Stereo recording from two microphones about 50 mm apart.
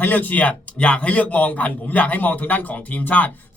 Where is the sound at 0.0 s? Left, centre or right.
Left.